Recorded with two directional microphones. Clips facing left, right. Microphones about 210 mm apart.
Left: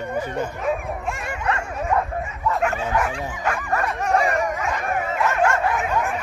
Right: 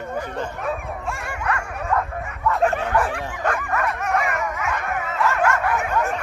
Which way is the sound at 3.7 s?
30° left (ahead or behind).